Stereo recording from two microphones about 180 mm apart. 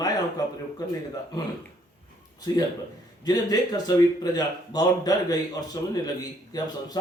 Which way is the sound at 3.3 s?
20° left (ahead or behind).